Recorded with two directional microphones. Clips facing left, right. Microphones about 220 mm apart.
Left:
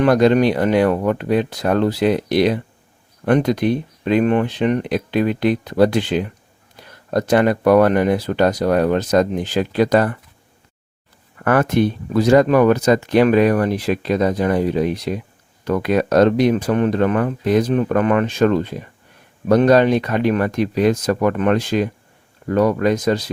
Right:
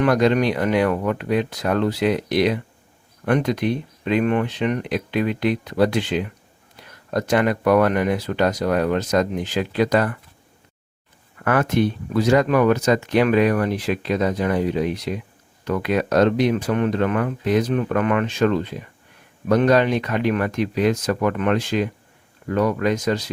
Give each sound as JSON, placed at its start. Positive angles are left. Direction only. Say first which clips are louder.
{"t": 0.0, "sound": "speech", "louder": "left 4 dB", "side_deg": 35}
{"t": 11.4, "sound": "speech", "louder": "left 3 dB", "side_deg": 40}